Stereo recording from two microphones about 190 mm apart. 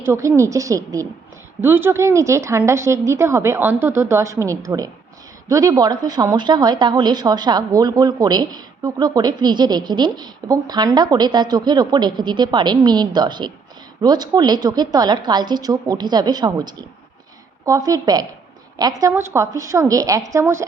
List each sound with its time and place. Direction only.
0.0 s a woman's voice: 15° right (ahead or behind)